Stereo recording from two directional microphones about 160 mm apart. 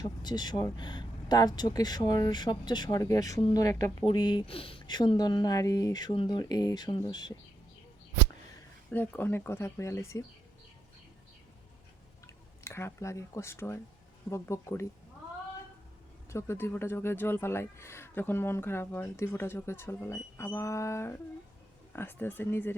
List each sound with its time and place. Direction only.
0.0 s speech: 25° left (ahead or behind)
8.9 s speech: 10° left (ahead or behind)
12.2 s speech: 15° left (ahead or behind)
16.3 s speech: 15° left (ahead or behind)